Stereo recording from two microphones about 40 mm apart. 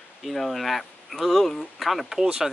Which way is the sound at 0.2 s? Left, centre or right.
Centre.